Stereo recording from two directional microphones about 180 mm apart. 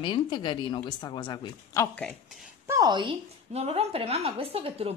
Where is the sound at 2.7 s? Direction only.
20° right (ahead or behind).